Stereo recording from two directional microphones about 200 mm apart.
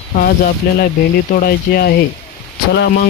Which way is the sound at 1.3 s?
50° left (ahead or behind).